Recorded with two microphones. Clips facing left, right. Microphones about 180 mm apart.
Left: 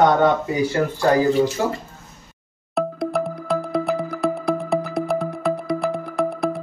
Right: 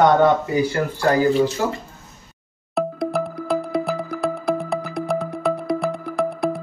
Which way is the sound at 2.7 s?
Centre (ahead or behind).